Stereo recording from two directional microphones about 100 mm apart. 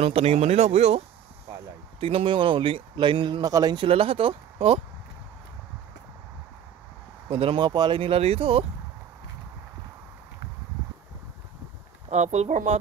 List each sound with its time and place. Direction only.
0.0 s speech: 90° right
2.0 s a man's voice: 70° right (ahead or behind)
3.4 s speech: 40° right (ahead or behind)
3.8 s speech: 70° right (ahead or behind)
7.2 s a man's voice: 60° right (ahead or behind)
8.0 s speech: 80° right
12.3 s speech: 90° right